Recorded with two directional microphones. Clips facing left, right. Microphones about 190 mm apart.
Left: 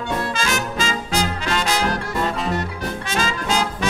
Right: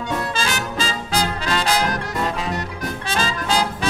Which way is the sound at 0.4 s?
35° right (ahead or behind).